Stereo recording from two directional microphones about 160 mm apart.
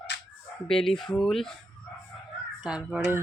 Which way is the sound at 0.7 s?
Centre (ahead or behind).